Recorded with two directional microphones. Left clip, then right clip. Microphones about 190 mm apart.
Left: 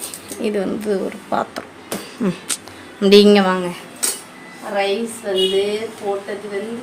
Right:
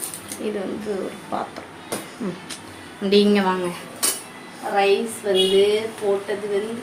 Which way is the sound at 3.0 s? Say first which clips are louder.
Left 7 dB; 60° left (ahead or behind).